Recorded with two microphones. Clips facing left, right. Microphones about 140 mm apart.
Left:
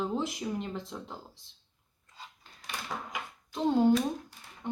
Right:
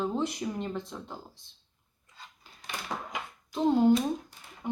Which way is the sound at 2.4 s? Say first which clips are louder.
Right 1 dB; 5° right (ahead or behind).